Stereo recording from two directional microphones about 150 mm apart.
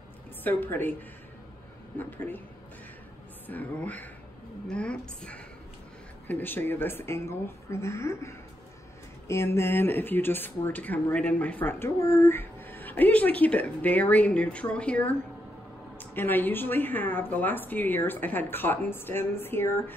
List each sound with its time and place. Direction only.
0.4 s speech: 10° left (ahead or behind)
2.0 s speech: 15° left (ahead or behind)
3.4 s speech: 10° left (ahead or behind)
16.2 s speech: 15° left (ahead or behind)